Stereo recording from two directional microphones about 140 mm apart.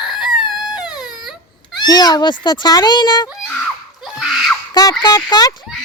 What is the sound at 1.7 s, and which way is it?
Speech, 30° left (ahead or behind).